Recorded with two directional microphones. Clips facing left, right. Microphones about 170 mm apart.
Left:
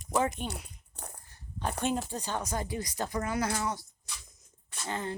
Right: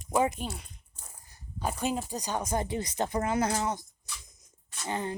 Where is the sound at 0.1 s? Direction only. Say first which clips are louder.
Right 2 dB; 10° right (ahead or behind).